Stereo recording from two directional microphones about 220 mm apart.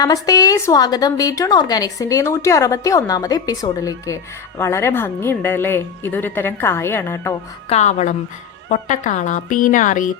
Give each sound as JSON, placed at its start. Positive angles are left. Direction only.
{"t": 0.0, "sound": "a woman's voice", "side_deg": 15}
{"t": 7.7, "sound": "a woman's voice", "side_deg": 30}